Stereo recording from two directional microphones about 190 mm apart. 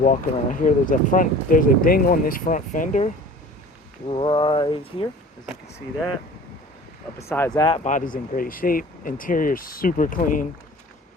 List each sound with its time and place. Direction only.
0.0 s speech: 45° left (ahead or behind)
4.1 s a sound: 25° left (ahead or behind)
7.2 s speech: 15° left (ahead or behind)
7.9 s speech: 45° left (ahead or behind)